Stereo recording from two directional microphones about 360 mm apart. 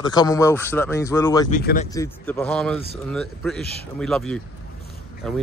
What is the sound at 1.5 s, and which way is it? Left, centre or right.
Speech, left.